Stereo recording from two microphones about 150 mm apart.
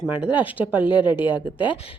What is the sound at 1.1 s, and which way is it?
Speech, 30° left (ahead or behind).